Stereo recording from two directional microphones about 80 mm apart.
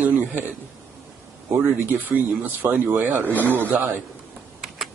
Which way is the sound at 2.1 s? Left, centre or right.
Right.